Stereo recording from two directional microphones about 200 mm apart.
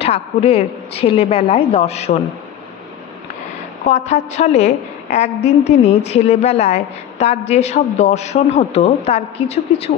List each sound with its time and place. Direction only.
0.0 s a woman's voice: 30° left (ahead or behind)
3.9 s a woman's voice: 35° left (ahead or behind)